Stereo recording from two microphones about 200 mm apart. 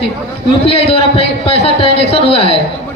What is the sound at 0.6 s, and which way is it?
A man's voice, 30° left (ahead or behind).